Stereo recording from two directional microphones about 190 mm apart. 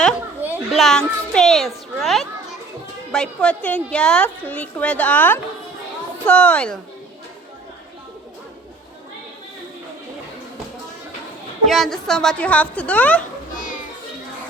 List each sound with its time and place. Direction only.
0.4 s a child's voice: 5° right (ahead or behind)
11.6 s a woman's voice: centre (ahead or behind)
13.5 s music: 45° left (ahead or behind)